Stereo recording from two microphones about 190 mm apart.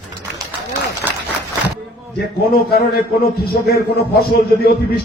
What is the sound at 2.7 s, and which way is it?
A man's voice, 55° left (ahead or behind).